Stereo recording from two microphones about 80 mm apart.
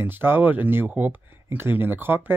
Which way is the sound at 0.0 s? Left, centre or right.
Right.